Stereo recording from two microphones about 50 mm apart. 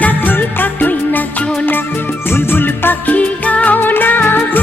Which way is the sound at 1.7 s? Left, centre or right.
Left.